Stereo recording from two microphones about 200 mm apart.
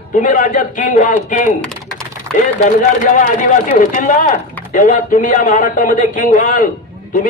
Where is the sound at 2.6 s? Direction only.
40° left (ahead or behind).